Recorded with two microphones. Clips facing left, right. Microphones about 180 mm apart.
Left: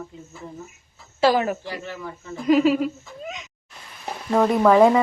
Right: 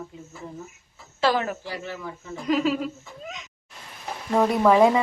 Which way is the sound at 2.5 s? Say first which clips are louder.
Left 6 dB; 5° left (ahead or behind).